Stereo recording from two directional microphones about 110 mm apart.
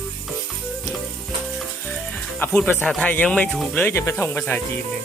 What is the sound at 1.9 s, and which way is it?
Music, 10° left (ahead or behind).